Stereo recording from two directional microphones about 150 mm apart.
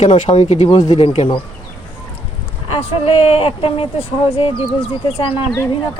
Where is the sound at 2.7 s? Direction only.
40° left (ahead or behind).